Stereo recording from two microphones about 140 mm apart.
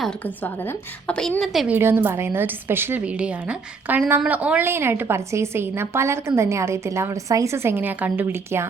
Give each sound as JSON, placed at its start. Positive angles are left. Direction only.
{"t": 0.4, "sound": "a woman's voice", "side_deg": 15}
{"t": 1.6, "sound": "a woman's voice", "side_deg": -15}